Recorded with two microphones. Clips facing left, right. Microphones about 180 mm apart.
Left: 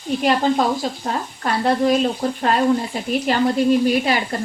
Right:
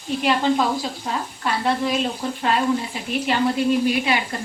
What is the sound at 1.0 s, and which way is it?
Speech, 40° left (ahead or behind).